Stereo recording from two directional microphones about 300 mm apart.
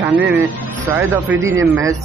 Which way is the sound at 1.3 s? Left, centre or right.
Right.